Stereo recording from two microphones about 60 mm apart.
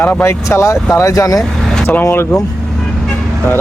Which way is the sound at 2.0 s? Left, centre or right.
Left.